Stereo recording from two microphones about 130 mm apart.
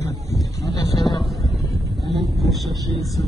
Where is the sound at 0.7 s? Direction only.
30° left (ahead or behind).